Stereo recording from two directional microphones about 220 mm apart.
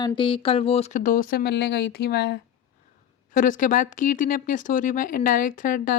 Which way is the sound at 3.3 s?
35° left (ahead or behind).